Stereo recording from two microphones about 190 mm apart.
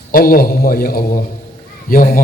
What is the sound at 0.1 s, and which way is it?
A man's voice, 50° left (ahead or behind).